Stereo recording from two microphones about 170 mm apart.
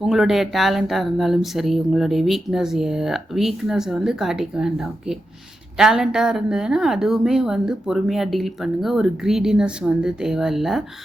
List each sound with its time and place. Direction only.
0.0 s speech: centre (ahead or behind)